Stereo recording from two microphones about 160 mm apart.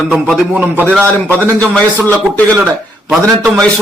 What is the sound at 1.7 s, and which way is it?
Speech, 10° left (ahead or behind).